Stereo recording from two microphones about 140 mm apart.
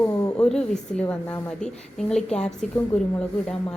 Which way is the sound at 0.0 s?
25° left (ahead or behind).